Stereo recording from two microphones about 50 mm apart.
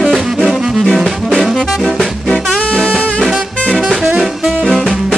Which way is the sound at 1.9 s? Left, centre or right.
Centre.